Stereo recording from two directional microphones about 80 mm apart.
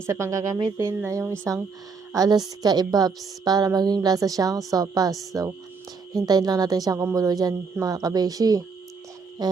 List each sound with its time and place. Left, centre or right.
0.0 s speech: right
2.1 s a woman's voice: right
9.4 s a sound: right